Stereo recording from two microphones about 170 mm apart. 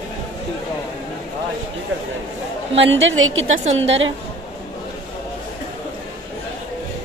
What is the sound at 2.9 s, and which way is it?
Speech, 90° right.